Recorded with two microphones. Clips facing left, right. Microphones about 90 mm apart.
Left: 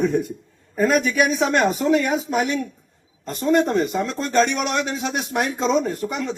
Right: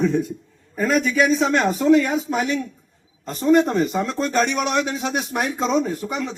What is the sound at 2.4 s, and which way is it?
Speech, 20° left (ahead or behind).